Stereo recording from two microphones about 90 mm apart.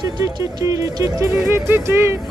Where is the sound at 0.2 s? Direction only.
40° right (ahead or behind).